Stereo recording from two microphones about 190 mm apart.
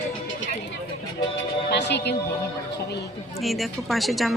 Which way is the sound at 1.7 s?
60° left (ahead or behind).